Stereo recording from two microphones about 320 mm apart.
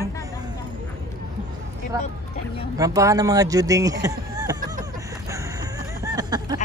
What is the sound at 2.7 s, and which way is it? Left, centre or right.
Speech, centre.